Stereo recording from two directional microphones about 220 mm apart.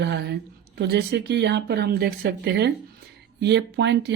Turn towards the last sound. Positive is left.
turn(degrees=-50)  # may be behind; listen again after turning